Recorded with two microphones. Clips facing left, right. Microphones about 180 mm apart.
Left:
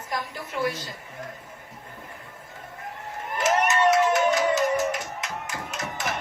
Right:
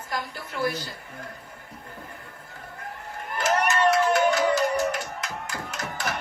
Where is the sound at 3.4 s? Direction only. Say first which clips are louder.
Left 1 dB; 20° left (ahead or behind).